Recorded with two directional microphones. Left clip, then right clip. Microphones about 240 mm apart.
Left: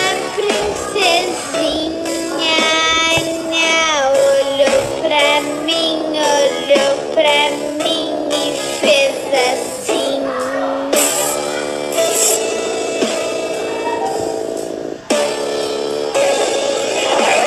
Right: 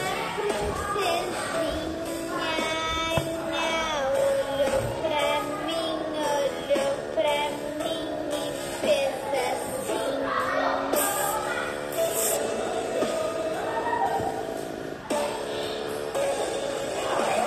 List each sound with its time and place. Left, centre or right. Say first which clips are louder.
0.0 s music: left 11 dB; left
8.8 s music: left 11 dB; left
16.2 s music: left 13 dB; left
17.1 s a sound: left 12 dB; left